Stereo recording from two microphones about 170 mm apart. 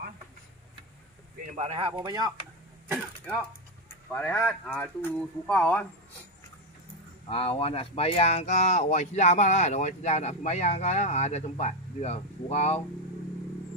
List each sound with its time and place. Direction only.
1.5 s speech: 40° right (ahead or behind)
3.9 s speech: 10° left (ahead or behind)
7.2 s speech: 35° left (ahead or behind)